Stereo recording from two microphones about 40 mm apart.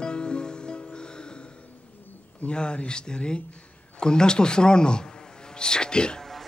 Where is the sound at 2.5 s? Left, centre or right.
Left.